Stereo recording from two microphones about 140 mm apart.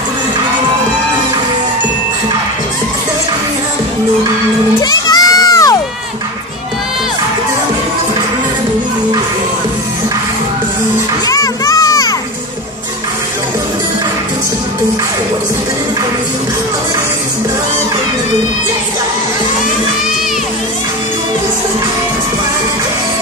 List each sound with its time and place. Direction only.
4.8 s crowd: 25° left (ahead or behind)
11.2 s children playing: 25° left (ahead or behind)